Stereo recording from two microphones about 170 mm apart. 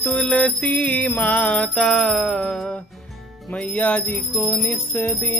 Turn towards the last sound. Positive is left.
turn(degrees=10)  # may be behind; listen again after turning